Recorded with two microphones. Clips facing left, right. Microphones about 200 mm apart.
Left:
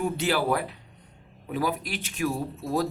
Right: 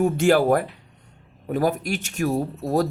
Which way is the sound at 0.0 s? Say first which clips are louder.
Right 8 dB; 45° right (ahead or behind).